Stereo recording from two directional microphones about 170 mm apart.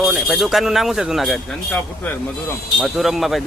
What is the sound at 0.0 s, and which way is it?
Speech, 5° right (ahead or behind).